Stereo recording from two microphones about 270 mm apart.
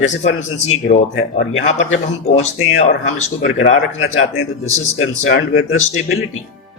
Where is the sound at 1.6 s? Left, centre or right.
Left.